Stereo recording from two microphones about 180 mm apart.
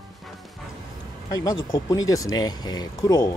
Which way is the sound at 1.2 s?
20° left (ahead or behind).